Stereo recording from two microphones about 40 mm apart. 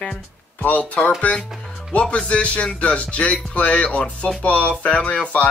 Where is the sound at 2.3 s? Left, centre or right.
Left.